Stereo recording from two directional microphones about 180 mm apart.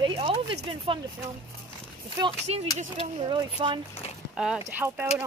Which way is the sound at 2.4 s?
35° right (ahead or behind).